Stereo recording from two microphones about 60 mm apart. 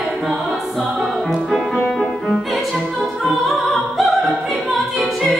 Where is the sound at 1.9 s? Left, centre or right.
Centre.